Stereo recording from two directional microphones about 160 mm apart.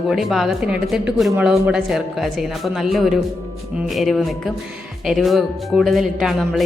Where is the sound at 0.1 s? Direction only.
Centre (ahead or behind).